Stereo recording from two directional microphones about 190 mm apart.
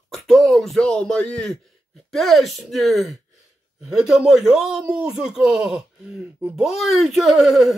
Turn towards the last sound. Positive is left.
turn(degrees=0)  # may be behind; listen again after turning